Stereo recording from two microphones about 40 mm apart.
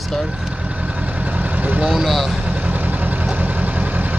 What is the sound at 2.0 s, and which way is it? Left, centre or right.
Speech, centre.